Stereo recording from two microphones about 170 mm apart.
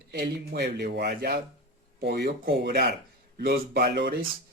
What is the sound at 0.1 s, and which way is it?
Speech, 80° right.